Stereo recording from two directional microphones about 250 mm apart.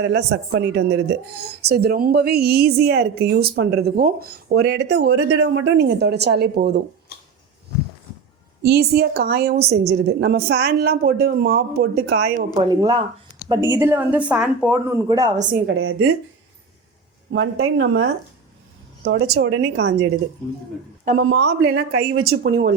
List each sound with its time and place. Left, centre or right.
0.0 s speech: right
8.6 s speech: right
12.5 s speech: centre
15.4 s speech: right
15.6 s a woman's voice: right
17.3 s a woman's voice: right
19.0 s a woman's voice: right
21.2 s a woman's voice: right